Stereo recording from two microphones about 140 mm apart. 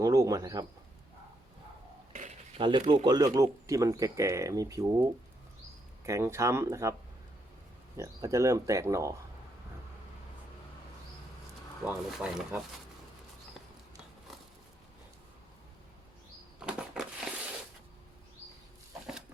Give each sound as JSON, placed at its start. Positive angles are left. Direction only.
{"t": 0.0, "sound": "speech", "side_deg": -25}
{"t": 2.6, "sound": "speech", "side_deg": -35}
{"t": 3.3, "sound": "speech", "side_deg": -20}
{"t": 6.1, "sound": "speech", "side_deg": -20}
{"t": 7.9, "sound": "speech", "side_deg": -20}
{"t": 11.9, "sound": "speech", "side_deg": -5}
{"t": 16.6, "sound": "a sound", "side_deg": -5}